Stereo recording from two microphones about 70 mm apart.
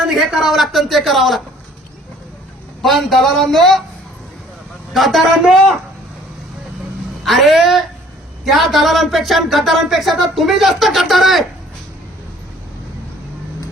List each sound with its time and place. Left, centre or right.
0.0 s speech: centre
2.8 s speech: centre
4.9 s speech: centre
7.3 s speech: centre